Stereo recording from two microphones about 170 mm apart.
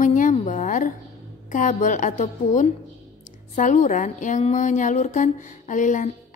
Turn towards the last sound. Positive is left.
turn(degrees=45)  # may be behind; listen again after turning